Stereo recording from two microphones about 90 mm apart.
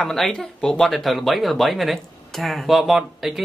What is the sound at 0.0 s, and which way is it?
Speech, 5° left (ahead or behind).